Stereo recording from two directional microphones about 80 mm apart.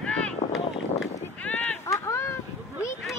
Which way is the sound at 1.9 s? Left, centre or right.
Left.